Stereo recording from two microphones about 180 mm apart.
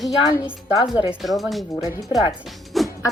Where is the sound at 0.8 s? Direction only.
25° left (ahead or behind).